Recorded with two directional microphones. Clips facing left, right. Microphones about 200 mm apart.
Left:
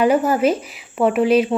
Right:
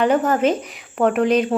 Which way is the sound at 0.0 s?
10° left (ahead or behind).